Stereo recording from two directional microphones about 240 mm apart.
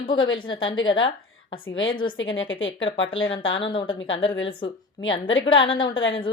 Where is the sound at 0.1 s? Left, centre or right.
Centre.